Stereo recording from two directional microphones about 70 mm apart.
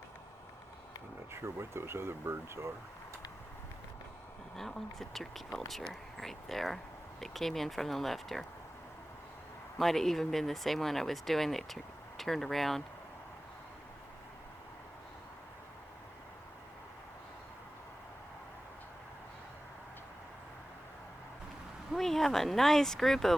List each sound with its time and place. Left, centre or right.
1.3 s speech: right
4.5 s speech: centre
9.7 s speech: centre
21.9 s speech: centre